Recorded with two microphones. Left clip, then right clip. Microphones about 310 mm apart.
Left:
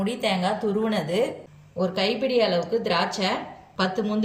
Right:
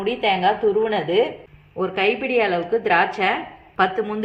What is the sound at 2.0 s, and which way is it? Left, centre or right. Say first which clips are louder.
Speech: right 3 dB; right.